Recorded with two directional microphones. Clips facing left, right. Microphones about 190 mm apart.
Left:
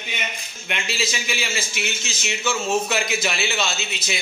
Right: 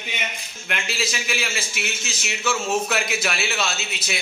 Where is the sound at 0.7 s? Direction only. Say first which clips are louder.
Left 1 dB; centre (ahead or behind).